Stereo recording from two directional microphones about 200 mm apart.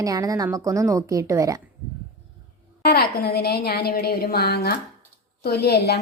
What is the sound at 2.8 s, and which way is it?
Speech, 50° left (ahead or behind).